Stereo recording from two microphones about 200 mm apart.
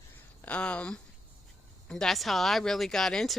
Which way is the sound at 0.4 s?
5° left (ahead or behind).